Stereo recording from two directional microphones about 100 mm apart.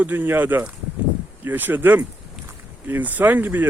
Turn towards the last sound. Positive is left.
turn(degrees=-20)  # may be behind; listen again after turning